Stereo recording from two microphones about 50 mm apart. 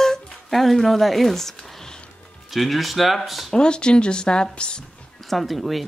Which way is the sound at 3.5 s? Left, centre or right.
Centre.